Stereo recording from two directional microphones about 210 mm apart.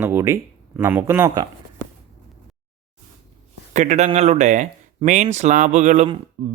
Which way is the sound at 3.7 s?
35° right (ahead or behind).